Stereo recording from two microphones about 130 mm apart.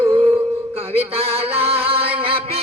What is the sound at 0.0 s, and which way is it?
Music, 45° right (ahead or behind).